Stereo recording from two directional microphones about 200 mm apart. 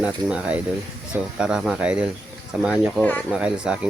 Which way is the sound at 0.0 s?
5° right (ahead or behind).